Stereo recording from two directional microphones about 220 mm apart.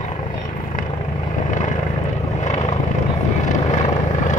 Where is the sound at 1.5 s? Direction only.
35° left (ahead or behind).